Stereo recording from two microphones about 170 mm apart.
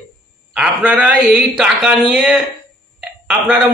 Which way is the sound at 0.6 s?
5° right (ahead or behind).